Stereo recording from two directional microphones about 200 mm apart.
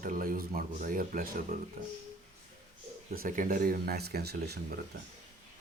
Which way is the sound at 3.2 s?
40° right (ahead or behind).